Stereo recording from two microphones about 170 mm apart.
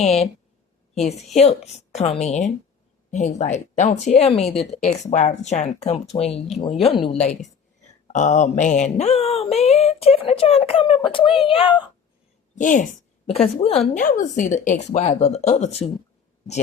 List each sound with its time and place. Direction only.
0.0 s speech: 40° left (ahead or behind)
12.5 s a woman's voice: 50° left (ahead or behind)
13.2 s speech: 35° left (ahead or behind)
14.0 s a woman's voice: 50° left (ahead or behind)